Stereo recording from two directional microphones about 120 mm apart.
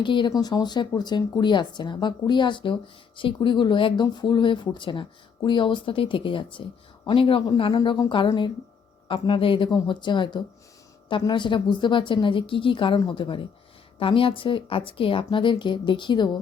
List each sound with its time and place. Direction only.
0.0 s a woman's voice: 40° left (ahead or behind)
7.4 s a woman's voice: 35° left (ahead or behind)